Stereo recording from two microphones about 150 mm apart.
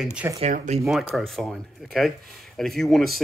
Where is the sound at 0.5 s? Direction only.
55° right (ahead or behind).